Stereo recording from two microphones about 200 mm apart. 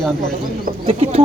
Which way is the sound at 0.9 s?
30° right (ahead or behind).